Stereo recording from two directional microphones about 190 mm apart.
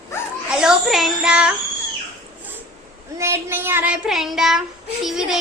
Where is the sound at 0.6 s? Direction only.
Centre (ahead or behind).